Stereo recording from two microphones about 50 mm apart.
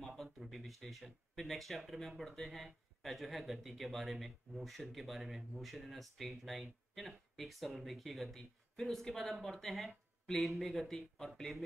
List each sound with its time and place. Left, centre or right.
0.0 s speech: centre